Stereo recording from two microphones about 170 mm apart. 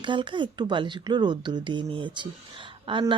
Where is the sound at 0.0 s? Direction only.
30° right (ahead or behind).